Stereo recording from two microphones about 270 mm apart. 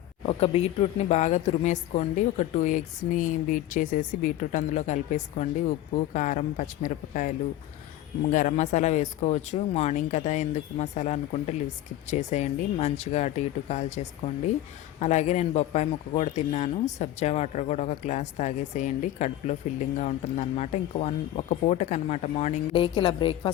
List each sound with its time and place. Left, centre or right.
0.3 s speech: left